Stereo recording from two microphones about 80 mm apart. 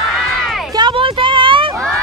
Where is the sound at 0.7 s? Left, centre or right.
Right.